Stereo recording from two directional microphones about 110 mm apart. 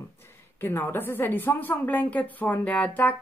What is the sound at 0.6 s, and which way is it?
A woman's voice, 20° left (ahead or behind).